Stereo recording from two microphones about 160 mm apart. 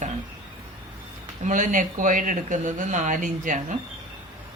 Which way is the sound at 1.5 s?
55° right (ahead or behind).